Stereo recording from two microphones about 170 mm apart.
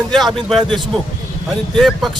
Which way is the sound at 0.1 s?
Centre (ahead or behind).